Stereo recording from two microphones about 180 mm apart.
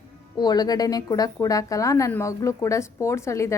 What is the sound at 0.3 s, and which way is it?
A woman's voice, 20° left (ahead or behind).